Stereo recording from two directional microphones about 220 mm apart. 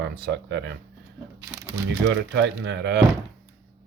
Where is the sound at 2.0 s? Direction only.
55° right (ahead or behind).